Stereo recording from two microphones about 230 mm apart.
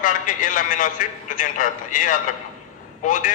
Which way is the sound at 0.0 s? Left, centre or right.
Left.